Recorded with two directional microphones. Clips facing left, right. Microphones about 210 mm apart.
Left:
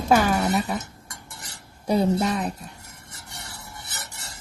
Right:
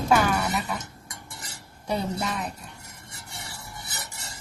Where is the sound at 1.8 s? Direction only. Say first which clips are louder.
Left 7 dB; 40° left (ahead or behind).